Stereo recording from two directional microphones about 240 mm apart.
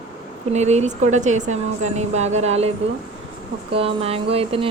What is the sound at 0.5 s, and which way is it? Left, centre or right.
Speech, right.